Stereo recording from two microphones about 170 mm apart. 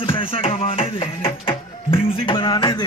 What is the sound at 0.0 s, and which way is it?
Music, 30° left (ahead or behind).